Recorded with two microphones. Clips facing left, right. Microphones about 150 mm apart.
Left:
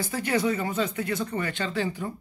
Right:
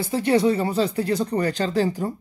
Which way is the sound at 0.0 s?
25° right (ahead or behind).